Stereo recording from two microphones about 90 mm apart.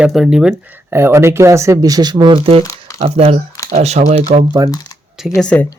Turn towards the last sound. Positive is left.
turn(degrees=15)  # may be behind; listen again after turning